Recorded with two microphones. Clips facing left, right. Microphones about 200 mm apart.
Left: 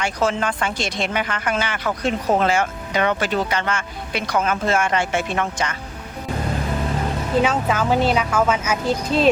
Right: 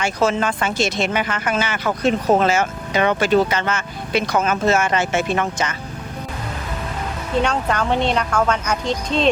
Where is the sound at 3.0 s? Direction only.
20° right (ahead or behind).